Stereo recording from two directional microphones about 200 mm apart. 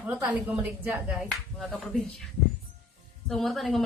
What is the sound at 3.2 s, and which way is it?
Speech, centre (ahead or behind).